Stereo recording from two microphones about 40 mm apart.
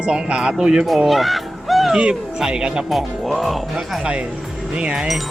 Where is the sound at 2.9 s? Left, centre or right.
Centre.